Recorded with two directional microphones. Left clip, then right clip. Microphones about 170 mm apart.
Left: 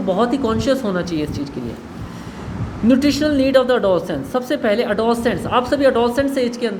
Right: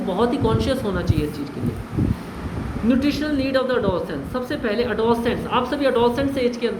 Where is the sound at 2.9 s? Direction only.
55° left (ahead or behind).